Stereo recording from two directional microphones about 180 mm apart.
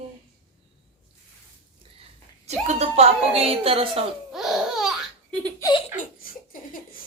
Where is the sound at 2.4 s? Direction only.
35° right (ahead or behind).